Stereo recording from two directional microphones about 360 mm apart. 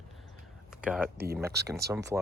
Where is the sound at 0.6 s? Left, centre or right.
Centre.